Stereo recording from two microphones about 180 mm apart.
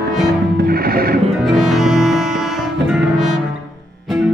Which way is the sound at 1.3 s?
Centre (ahead or behind).